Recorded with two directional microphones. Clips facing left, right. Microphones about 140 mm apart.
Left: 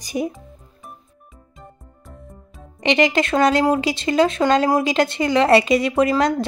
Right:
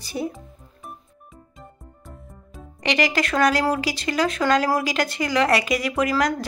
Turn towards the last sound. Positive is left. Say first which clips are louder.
# left 4 dB
turn(degrees=25)  # may be behind; listen again after turning